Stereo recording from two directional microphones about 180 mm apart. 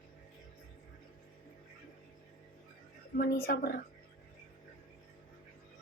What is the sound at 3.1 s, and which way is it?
Speech, 60° left (ahead or behind).